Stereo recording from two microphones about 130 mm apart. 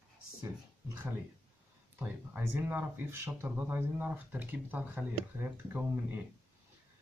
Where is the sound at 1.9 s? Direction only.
15° right (ahead or behind).